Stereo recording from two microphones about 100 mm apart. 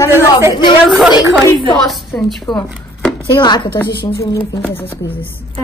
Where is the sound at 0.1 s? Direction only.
25° right (ahead or behind).